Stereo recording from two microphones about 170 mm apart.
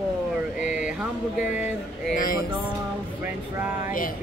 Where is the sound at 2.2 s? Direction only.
55° left (ahead or behind).